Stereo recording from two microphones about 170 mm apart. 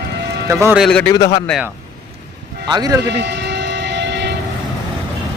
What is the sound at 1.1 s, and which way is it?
Speech, 20° left (ahead or behind).